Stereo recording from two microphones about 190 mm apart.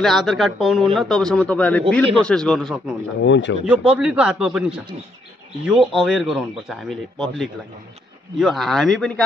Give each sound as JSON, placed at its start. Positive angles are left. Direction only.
{"t": 0.0, "sound": "speech", "side_deg": 0}
{"t": 3.2, "sound": "speech", "side_deg": 75}
{"t": 3.6, "sound": "speech", "side_deg": -5}
{"t": 8.4, "sound": "speech", "side_deg": 0}